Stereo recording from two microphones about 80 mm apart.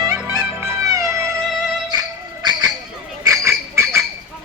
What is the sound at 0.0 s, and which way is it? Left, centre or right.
Music, right.